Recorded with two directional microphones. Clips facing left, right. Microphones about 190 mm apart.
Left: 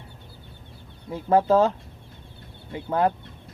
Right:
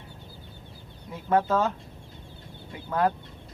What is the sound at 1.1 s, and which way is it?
Speech, 30° left (ahead or behind).